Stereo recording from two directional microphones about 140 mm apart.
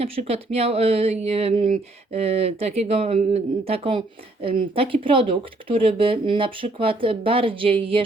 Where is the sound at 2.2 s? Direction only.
45° right (ahead or behind).